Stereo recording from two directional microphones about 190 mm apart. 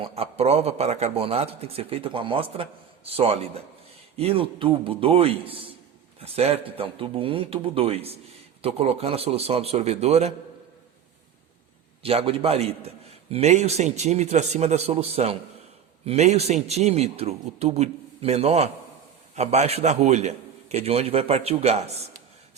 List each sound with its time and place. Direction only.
0.0 s a man's voice: 30° right (ahead or behind)
12.0 s a man's voice: 30° right (ahead or behind)